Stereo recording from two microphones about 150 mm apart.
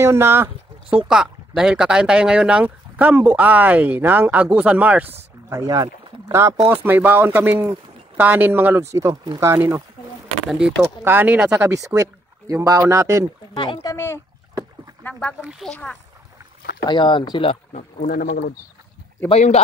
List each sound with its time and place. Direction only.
0.0 s speech: 15° right (ahead or behind)
5.5 s speech: 20° right (ahead or behind)
13.6 s speech: 30° left (ahead or behind)
13.9 s speech: 15° left (ahead or behind)
15.7 s speech: 5° left (ahead or behind)
16.8 s speech: 30° left (ahead or behind)
18.0 s speech: 90° left
19.2 s speech: 45° left (ahead or behind)